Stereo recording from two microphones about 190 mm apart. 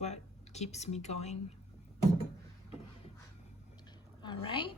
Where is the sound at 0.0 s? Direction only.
35° left (ahead or behind).